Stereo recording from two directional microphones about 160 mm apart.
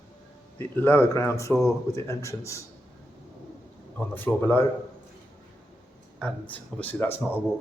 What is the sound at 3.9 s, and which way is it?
Speech, 10° left (ahead or behind).